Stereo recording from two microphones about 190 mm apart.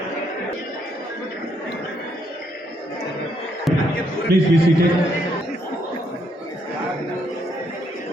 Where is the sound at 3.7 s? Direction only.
Centre (ahead or behind).